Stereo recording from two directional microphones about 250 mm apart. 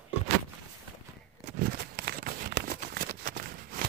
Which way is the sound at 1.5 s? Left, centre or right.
Right.